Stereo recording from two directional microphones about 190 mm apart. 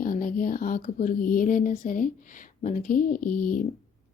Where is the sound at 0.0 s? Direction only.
45° left (ahead or behind).